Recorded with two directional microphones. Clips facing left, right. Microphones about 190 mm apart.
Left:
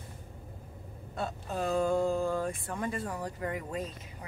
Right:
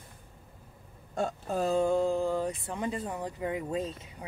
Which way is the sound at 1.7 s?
20° right (ahead or behind).